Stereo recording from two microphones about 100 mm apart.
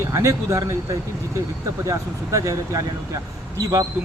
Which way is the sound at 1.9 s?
30° right (ahead or behind).